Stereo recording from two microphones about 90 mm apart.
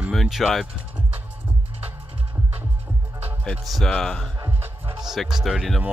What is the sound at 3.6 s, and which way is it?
Speech, centre (ahead or behind).